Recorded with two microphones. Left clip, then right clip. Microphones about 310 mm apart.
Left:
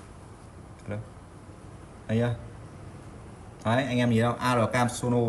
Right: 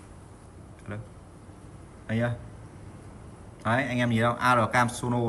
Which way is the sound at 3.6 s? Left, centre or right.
Centre.